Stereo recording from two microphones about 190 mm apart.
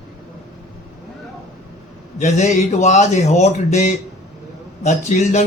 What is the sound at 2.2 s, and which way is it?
Speech, 40° left (ahead or behind).